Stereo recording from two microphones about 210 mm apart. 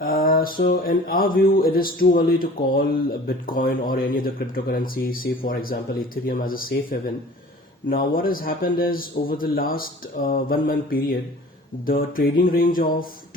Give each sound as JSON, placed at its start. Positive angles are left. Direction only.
{"t": 0.0, "sound": "mantra", "side_deg": 45}
{"t": 7.9, "sound": "mantra", "side_deg": 40}